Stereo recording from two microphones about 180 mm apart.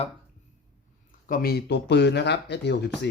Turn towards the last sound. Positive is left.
turn(degrees=70)  # may be behind; listen again after turning